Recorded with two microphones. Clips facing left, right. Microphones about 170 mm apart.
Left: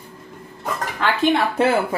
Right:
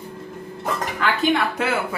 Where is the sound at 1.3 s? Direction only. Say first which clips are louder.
Left 5 dB; 35° left (ahead or behind).